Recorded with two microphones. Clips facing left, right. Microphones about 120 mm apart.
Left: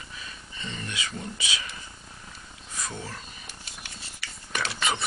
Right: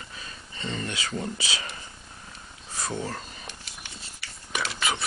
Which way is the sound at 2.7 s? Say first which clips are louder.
Right 5 dB; 35° right (ahead or behind).